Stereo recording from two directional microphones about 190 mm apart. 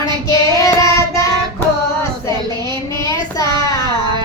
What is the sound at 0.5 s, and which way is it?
Child singing, 20° left (ahead or behind).